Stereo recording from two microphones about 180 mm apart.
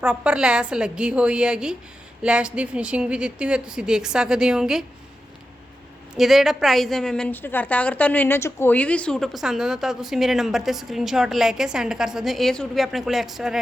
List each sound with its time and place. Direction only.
0.0 s a woman's voice: 5° right (ahead or behind)
6.1 s a woman's voice: centre (ahead or behind)